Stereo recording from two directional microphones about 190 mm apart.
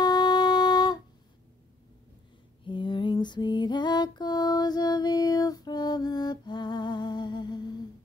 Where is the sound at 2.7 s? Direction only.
25° left (ahead or behind).